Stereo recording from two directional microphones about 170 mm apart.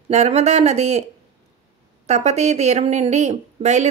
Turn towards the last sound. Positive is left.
turn(degrees=-40)  # may be behind; listen again after turning